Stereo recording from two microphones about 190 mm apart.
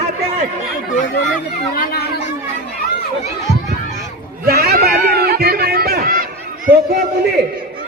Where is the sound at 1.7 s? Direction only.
50° left (ahead or behind).